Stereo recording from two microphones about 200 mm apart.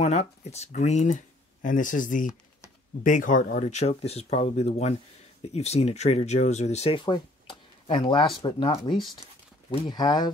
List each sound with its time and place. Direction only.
0.0 s speech: 35° left (ahead or behind)